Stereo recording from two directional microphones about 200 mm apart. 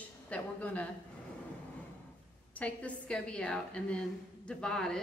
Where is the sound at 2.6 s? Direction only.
5° left (ahead or behind).